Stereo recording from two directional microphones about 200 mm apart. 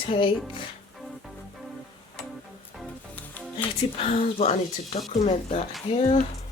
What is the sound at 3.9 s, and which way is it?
Speech, 30° left (ahead or behind).